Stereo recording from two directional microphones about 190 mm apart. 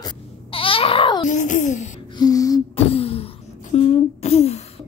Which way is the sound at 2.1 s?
20° left (ahead or behind).